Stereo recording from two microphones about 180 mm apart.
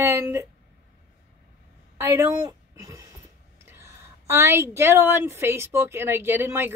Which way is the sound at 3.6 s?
15° right (ahead or behind).